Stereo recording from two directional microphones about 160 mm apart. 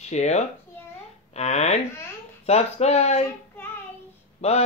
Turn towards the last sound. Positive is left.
turn(degrees=40)  # may be behind; listen again after turning